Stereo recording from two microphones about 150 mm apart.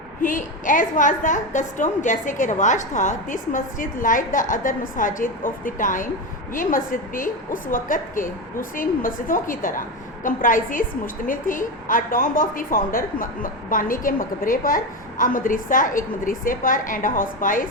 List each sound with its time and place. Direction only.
0.2 s a woman's voice: 60° left (ahead or behind)